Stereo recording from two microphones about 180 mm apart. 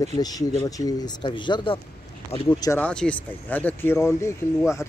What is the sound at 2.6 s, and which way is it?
Speech, 15° left (ahead or behind).